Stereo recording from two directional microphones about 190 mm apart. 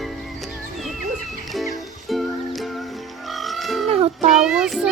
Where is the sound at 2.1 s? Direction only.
Centre (ahead or behind).